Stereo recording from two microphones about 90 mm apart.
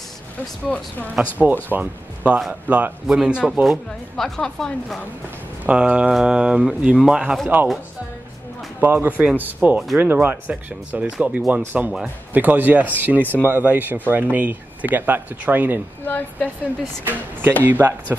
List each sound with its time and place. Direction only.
0.7 s speech: 20° left (ahead or behind)
1.4 s speech: 20° right (ahead or behind)
3.6 s speech: centre (ahead or behind)
5.7 s speech: 10° right (ahead or behind)
8.8 s speech: 20° right (ahead or behind)
16.1 s a woman's voice: 20° left (ahead or behind)
17.0 s speech: 20° right (ahead or behind)